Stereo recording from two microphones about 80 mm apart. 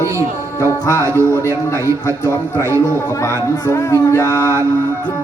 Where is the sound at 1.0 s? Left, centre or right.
Right.